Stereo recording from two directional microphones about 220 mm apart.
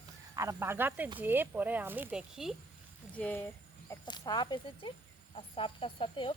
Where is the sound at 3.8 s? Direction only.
20° left (ahead or behind).